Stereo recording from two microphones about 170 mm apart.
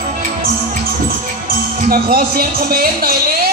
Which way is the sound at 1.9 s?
60° right (ahead or behind).